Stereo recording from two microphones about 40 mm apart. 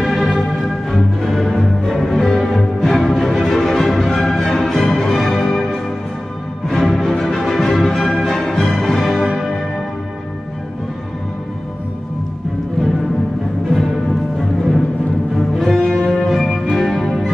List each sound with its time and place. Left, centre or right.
0.0 s music: centre
0.8 s music: centre
15.3 s cello: centre
15.8 s music: left
16.1 s music: centre
17.0 s music: centre